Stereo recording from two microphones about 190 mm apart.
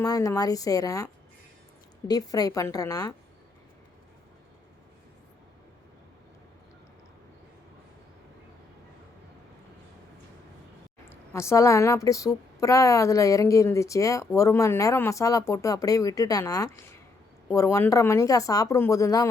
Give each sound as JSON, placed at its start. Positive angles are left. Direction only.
{"t": 0.0, "sound": "a woman's voice", "side_deg": 20}
{"t": 11.1, "sound": "a woman's voice", "side_deg": 15}